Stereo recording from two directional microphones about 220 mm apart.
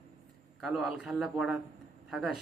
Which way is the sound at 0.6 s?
Centre (ahead or behind).